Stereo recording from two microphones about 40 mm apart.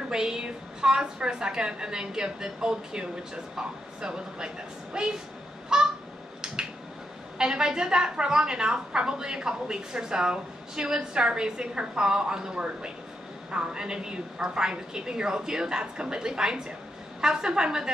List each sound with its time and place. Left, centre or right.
0.1 s a woman's voice: centre
5.7 s honk: centre
7.3 s a woman's voice: centre